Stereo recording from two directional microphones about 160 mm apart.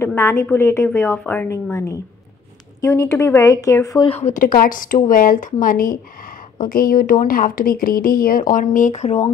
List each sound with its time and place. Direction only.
0.0 s a woman's voice: 15° left (ahead or behind)
4.1 s speech: 50° left (ahead or behind)